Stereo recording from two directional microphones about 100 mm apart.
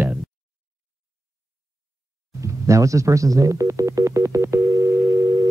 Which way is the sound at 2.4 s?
30° right (ahead or behind).